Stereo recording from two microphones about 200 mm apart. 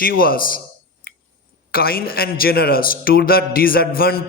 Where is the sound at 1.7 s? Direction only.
50° left (ahead or behind).